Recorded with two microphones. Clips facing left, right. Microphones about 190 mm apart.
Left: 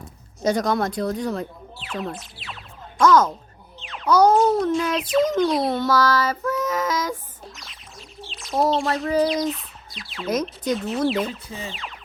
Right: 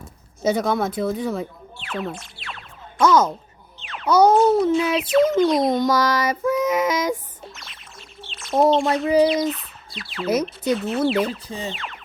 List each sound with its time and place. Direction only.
0.4 s speech: 5° right (ahead or behind)
5.6 s child singing: 15° right (ahead or behind)
7.4 s a sound: centre (ahead or behind)
9.1 s speech: centre (ahead or behind)
11.4 s music: 35° right (ahead or behind)
11.7 s speech: centre (ahead or behind)